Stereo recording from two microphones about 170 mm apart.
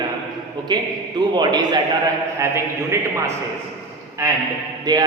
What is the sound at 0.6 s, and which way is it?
A man's voice, 25° right (ahead or behind).